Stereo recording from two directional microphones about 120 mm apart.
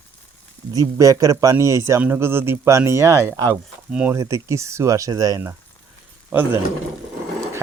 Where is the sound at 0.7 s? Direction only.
30° right (ahead or behind).